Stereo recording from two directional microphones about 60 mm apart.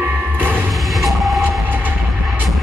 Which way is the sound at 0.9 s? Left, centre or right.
Centre.